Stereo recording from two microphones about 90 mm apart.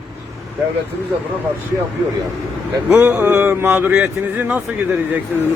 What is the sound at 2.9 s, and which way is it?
Speech, 20° right (ahead or behind).